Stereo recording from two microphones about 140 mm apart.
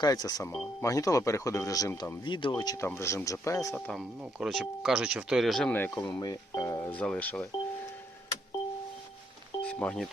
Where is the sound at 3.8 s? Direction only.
Centre (ahead or behind).